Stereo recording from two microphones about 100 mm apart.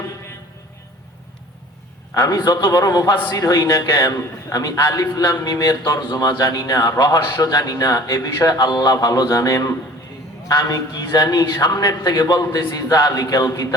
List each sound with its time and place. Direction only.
2.1 s a man's voice: 35° left (ahead or behind)